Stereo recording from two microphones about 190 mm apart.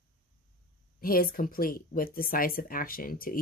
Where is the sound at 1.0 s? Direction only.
50° left (ahead or behind).